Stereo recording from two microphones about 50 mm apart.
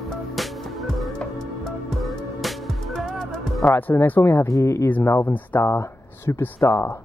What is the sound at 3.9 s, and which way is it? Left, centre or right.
Speech, left.